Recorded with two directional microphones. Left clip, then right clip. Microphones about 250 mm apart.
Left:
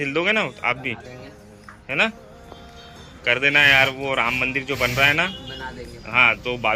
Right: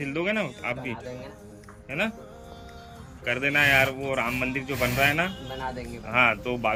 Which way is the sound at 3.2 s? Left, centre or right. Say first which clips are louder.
Left 7 dB; centre.